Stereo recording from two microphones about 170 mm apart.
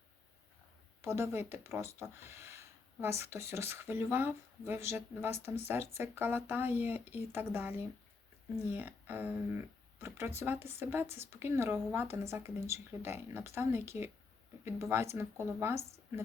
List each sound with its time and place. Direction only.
1.0 s speech: 15° right (ahead or behind)